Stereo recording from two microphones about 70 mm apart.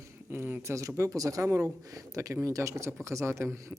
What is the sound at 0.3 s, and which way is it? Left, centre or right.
Speech, right.